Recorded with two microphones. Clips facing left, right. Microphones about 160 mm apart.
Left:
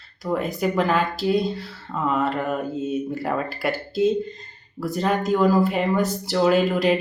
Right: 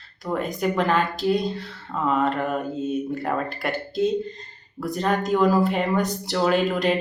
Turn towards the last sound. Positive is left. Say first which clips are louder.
# left 2 dB
turn(degrees=5)  # may be behind; listen again after turning